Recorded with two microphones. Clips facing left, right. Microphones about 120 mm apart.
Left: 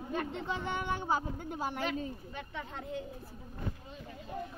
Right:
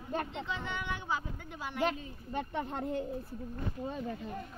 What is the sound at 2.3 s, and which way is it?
Speech, 50° right (ahead or behind).